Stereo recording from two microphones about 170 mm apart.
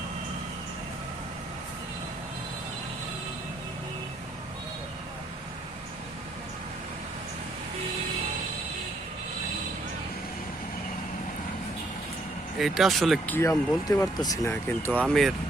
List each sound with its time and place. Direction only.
12.5 s speech: centre (ahead or behind)
13.3 s speech: 15° left (ahead or behind)
15.0 s speech: centre (ahead or behind)